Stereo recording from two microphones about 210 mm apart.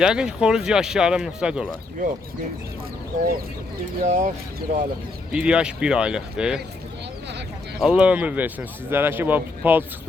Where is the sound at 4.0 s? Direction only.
35° right (ahead or behind).